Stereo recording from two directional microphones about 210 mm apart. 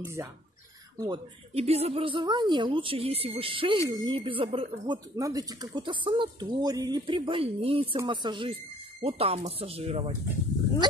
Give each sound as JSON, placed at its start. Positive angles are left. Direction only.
{"t": 0.0, "sound": "speech", "side_deg": -10}